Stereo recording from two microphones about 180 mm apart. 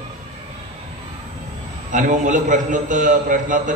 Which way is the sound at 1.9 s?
45° right (ahead or behind).